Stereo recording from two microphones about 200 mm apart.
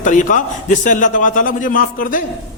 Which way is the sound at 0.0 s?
40° left (ahead or behind).